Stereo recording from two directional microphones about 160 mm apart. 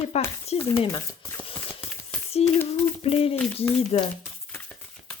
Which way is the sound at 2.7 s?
40° left (ahead or behind).